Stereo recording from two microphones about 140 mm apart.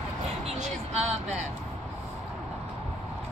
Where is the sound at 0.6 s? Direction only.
50° right (ahead or behind).